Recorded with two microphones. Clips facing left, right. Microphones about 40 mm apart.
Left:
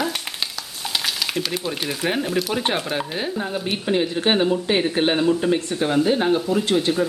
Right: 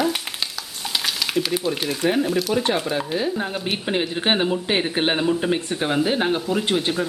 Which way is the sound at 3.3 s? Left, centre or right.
Centre.